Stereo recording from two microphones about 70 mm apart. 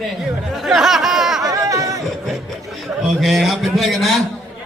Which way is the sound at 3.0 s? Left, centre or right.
Centre.